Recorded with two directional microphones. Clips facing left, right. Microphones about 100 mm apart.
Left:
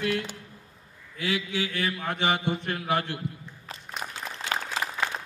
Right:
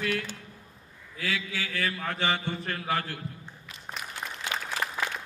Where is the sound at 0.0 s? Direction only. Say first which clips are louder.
Left 2 dB; 20° left (ahead or behind).